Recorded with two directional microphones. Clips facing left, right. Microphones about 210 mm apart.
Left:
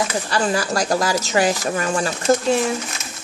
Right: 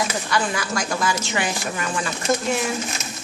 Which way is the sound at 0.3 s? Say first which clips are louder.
Left 5 dB; 35° left (ahead or behind).